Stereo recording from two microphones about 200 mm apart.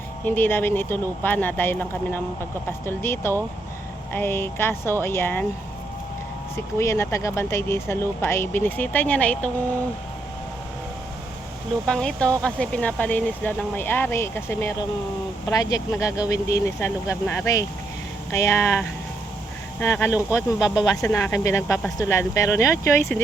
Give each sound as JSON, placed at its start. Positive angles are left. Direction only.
{"t": 0.3, "sound": "speech", "side_deg": 10}
{"t": 6.7, "sound": "speech", "side_deg": 15}
{"t": 11.9, "sound": "speech", "side_deg": 5}
{"t": 20.1, "sound": "speech", "side_deg": -5}
{"t": 21.1, "sound": "speech", "side_deg": 15}